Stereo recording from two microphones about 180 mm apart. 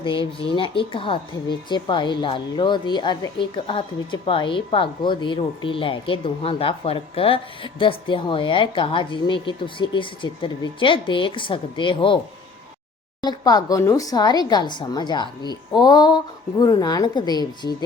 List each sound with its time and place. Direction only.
0.0 s speech: 30° left (ahead or behind)
13.2 s speech: 20° left (ahead or behind)